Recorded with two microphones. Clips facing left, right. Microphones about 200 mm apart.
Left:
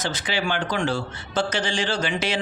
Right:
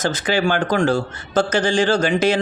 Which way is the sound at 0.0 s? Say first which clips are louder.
Right 7 dB; 45° right (ahead or behind).